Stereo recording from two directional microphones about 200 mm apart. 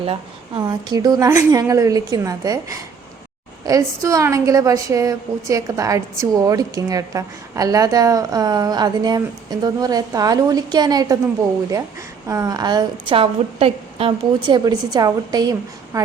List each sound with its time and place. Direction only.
0.0 s a woman's voice: 25° right (ahead or behind)
12.3 s a woman's voice: 15° right (ahead or behind)